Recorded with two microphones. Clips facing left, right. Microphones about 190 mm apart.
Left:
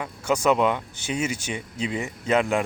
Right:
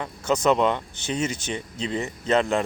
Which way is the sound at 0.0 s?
10° left (ahead or behind).